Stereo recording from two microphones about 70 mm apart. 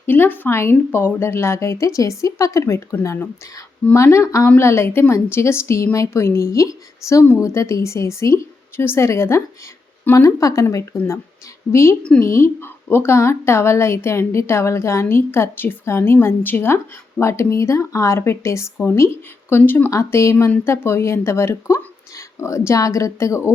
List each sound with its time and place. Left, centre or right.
0.0 s a woman's voice: left
3.9 s a woman's voice: left
19.9 s a woman's voice: left